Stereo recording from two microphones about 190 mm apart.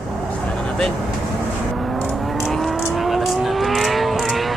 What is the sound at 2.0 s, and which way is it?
Vehicle, centre (ahead or behind).